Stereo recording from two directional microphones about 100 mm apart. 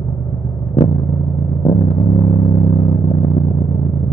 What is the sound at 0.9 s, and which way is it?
Vehicle, 45° left (ahead or behind).